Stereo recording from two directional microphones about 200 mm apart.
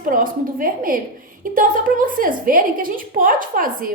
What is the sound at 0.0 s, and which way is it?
A woman's voice, 45° right (ahead or behind).